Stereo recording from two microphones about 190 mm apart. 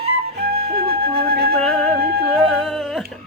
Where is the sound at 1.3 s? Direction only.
55° right (ahead or behind).